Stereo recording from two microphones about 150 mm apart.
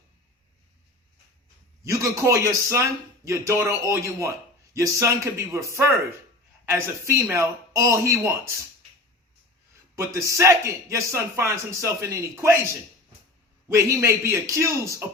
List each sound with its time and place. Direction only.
1.8 s a man's voice: 20° right (ahead or behind)
10.0 s a man's voice: 20° right (ahead or behind)
13.7 s a man's voice: 20° right (ahead or behind)